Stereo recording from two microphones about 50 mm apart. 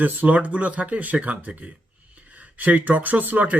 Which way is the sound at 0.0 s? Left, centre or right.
Right.